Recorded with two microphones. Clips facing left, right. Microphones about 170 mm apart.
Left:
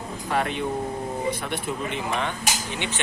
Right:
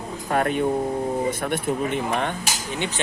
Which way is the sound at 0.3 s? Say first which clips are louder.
Right 4 dB; 45° right (ahead or behind).